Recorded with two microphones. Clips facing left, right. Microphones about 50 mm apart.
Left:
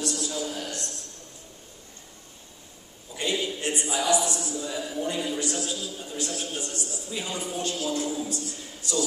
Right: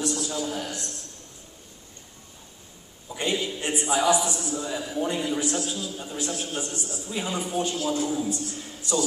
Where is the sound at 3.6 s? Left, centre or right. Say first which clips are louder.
Right 6 dB; centre.